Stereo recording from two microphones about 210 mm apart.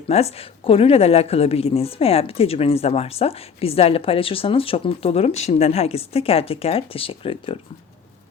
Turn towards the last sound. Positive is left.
turn(degrees=25)  # may be behind; listen again after turning